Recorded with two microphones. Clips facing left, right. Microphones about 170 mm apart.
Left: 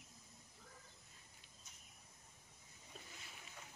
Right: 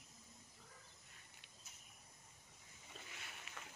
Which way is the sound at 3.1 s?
70° right (ahead or behind).